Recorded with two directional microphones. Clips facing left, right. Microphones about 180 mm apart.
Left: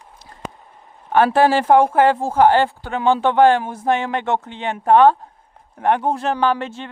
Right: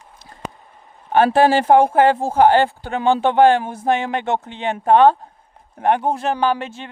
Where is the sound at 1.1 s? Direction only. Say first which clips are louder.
Right 1 dB; 20° right (ahead or behind).